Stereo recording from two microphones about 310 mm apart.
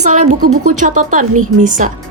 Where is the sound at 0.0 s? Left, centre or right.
Right.